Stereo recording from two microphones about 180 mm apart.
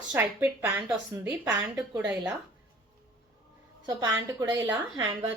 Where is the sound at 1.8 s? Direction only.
5° right (ahead or behind).